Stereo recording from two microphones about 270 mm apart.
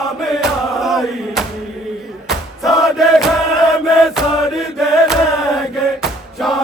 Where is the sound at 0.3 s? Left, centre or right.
Centre.